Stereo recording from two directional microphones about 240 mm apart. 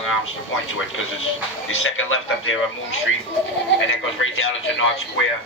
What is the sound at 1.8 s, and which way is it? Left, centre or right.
Speech, left.